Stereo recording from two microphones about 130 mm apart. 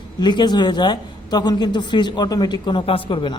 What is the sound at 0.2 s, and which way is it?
A man's voice, 35° left (ahead or behind).